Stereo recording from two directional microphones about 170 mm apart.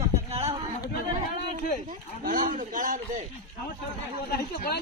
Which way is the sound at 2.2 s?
50° right (ahead or behind).